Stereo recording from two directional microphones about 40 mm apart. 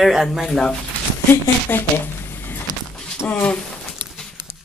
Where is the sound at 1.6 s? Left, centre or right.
Left.